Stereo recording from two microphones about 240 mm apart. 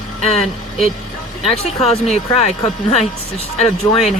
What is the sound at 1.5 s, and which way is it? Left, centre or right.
Speech, left.